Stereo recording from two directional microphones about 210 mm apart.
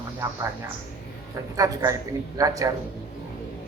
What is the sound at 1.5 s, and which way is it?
Speech, 15° right (ahead or behind).